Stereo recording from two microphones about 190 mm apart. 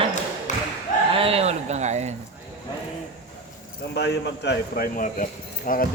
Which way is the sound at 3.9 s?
60° left (ahead or behind).